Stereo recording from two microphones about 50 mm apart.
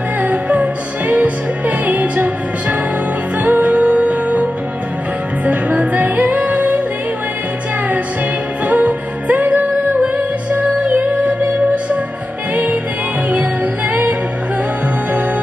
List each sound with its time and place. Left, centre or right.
0.2 s music: right
8.6 s music: right
13.3 s music: right